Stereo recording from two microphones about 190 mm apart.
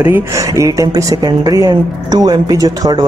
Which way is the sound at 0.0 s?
15° right (ahead or behind).